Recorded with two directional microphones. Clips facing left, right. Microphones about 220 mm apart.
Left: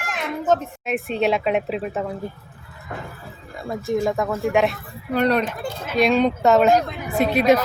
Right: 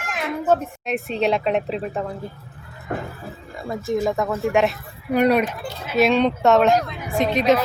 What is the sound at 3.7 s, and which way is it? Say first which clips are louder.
A woman's voice: even; centre (ahead or behind).